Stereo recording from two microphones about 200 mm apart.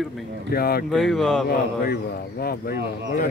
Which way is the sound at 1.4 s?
50° left (ahead or behind).